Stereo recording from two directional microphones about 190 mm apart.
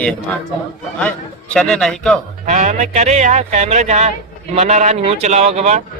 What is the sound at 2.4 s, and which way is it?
Speech, 40° right (ahead or behind).